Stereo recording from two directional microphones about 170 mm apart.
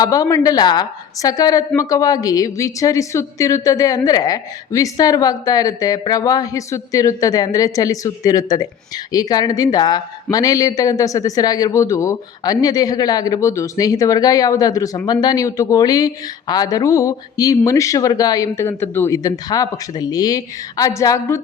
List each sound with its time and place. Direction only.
0.0 s speech: 20° left (ahead or behind)